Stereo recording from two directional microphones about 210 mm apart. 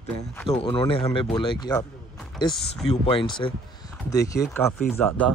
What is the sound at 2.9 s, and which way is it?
Speech, 25° left (ahead or behind).